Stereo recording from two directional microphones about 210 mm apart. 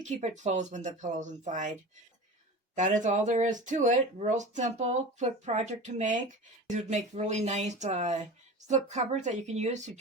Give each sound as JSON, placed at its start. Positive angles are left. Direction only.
{"t": 0.0, "sound": "speech", "side_deg": -35}
{"t": 2.7, "sound": "speech", "side_deg": -35}